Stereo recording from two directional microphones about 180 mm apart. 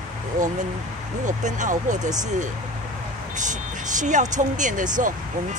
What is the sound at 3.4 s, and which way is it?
Speech, 45° right (ahead or behind).